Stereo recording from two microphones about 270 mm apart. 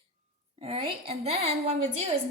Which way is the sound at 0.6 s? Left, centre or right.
Right.